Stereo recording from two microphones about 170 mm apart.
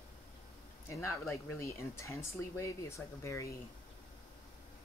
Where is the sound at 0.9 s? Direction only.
15° left (ahead or behind).